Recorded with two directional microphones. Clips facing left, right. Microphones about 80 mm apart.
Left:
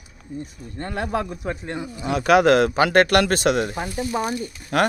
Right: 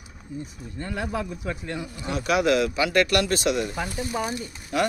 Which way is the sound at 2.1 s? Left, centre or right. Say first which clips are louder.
Left 6 dB; left.